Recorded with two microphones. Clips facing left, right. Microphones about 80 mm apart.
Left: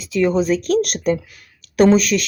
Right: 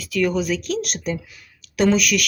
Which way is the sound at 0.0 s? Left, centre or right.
Left.